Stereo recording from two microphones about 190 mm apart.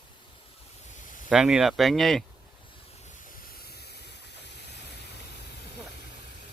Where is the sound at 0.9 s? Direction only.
45° left (ahead or behind).